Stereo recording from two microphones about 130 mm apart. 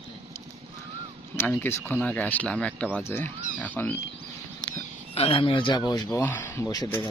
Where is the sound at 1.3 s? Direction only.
15° left (ahead or behind).